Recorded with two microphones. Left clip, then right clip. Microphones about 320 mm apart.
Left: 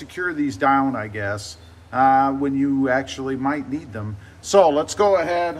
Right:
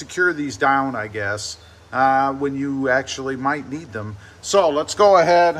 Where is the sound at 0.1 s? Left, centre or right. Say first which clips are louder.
Right 5 dB; centre.